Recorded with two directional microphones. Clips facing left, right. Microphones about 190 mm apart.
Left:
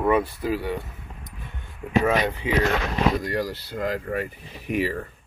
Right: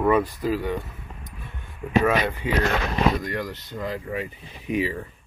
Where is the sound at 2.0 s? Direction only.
20° left (ahead or behind).